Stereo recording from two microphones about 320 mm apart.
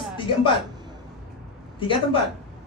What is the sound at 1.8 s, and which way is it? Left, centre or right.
Speech, centre.